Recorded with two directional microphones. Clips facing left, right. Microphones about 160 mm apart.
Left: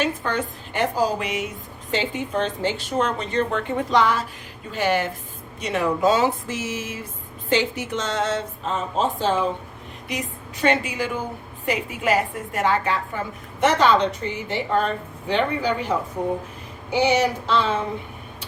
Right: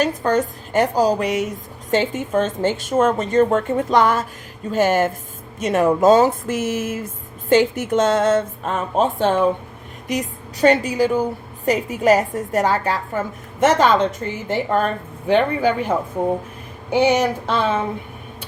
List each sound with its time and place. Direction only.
0.0 s a woman's voice: 40° right (ahead or behind); by 9.5 s 55° right (ahead or behind)
10.1 s a woman's voice: 40° right (ahead or behind)